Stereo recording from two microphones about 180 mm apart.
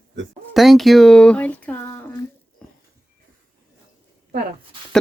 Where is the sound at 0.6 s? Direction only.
Centre (ahead or behind).